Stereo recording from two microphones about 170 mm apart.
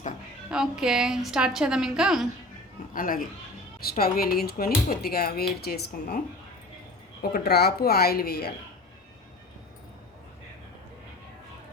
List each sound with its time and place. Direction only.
0.5 s a woman's voice: 5° right (ahead or behind)
2.9 s speech: 55° left (ahead or behind)
7.2 s a woman's voice: 70° left (ahead or behind)